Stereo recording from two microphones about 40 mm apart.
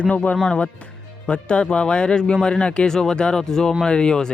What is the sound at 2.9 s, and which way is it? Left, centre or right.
A man's voice, centre.